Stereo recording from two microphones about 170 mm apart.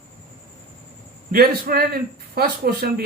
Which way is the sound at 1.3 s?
60° right (ahead or behind).